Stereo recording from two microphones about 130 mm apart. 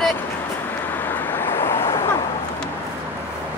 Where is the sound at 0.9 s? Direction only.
15° left (ahead or behind).